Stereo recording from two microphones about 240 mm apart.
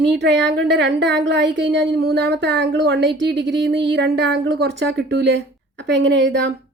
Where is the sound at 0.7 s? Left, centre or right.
Right.